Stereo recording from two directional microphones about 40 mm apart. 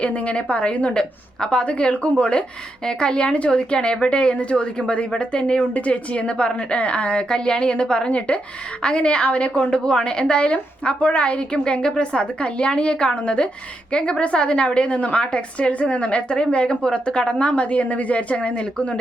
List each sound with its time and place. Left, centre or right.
0.0 s a woman's voice: left
0.9 s a woman's voice: left
2.8 s a woman's voice: left